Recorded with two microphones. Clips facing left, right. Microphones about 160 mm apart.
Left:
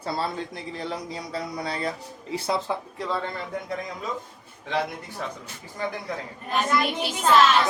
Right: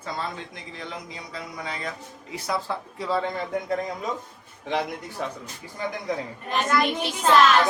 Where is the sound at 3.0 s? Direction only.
10° right (ahead or behind).